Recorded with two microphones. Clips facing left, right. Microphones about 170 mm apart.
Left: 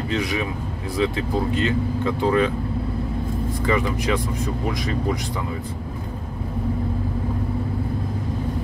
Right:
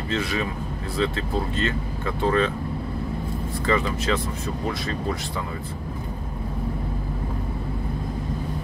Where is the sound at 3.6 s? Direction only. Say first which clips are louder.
Left 1 dB; 15° left (ahead or behind).